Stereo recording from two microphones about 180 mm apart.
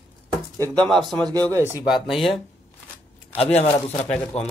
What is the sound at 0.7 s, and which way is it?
Speech, 5° left (ahead or behind).